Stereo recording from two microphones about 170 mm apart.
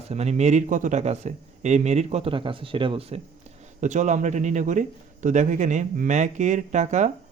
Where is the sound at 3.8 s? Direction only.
45° right (ahead or behind).